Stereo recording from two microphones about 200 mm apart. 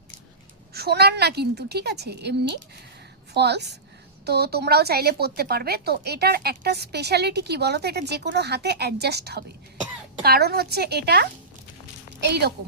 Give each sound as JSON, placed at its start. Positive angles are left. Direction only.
{"t": 0.7, "sound": "a woman's voice", "side_deg": -55}